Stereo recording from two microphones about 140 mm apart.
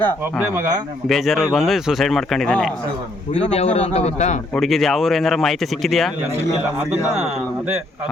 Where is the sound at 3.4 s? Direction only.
45° left (ahead or behind).